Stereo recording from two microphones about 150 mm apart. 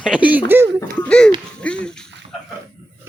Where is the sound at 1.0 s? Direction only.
5° left (ahead or behind).